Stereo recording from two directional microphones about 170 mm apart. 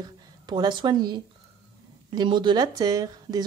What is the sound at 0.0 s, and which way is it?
Speech, 25° right (ahead or behind).